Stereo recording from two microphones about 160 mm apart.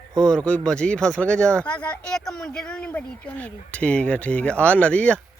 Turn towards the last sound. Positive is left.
turn(degrees=10)  # may be behind; listen again after turning